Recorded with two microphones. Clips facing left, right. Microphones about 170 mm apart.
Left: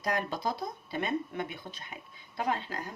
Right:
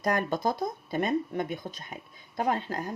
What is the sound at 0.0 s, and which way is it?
Speech, 50° right (ahead or behind).